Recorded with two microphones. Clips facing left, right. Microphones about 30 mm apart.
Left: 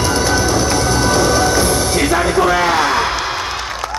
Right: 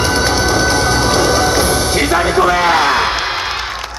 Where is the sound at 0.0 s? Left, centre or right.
Right.